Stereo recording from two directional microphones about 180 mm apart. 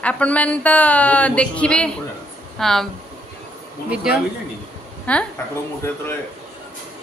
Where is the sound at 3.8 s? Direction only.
5° right (ahead or behind).